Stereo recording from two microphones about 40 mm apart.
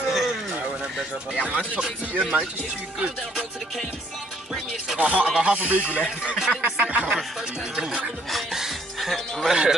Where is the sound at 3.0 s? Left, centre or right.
Right.